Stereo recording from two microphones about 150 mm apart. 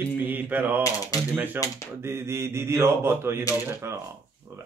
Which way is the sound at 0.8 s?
20° left (ahead or behind).